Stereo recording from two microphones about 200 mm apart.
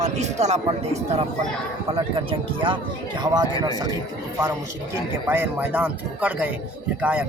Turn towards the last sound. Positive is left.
turn(degrees=-5)  # may be behind; listen again after turning